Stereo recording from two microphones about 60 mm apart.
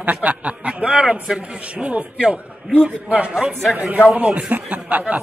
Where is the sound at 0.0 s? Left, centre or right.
Right.